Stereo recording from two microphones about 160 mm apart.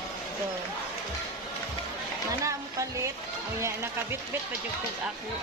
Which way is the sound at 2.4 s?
20° right (ahead or behind).